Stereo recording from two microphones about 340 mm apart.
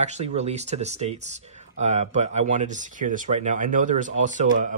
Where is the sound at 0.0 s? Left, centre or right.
Centre.